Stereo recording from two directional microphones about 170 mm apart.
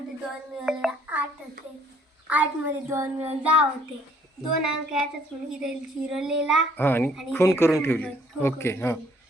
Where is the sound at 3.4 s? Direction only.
5° right (ahead or behind).